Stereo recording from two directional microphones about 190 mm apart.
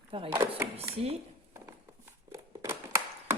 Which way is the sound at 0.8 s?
30° right (ahead or behind).